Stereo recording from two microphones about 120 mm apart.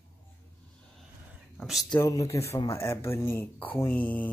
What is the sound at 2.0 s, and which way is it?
Speech, 25° left (ahead or behind).